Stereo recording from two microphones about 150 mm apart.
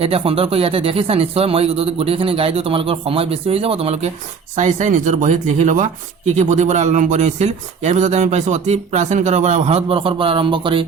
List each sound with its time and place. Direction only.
0.0 s speech: 40° right (ahead or behind)
4.5 s speech: 55° right (ahead or behind); by 10.8 s 35° right (ahead or behind)